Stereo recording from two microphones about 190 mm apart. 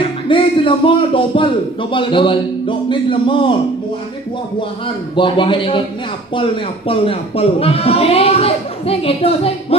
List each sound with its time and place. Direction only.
0.0 s a man's voice: 25° left (ahead or behind)
4.6 s a man's voice: 25° left (ahead or behind)